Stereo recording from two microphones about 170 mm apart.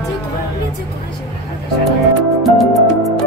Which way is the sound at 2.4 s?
Centre (ahead or behind).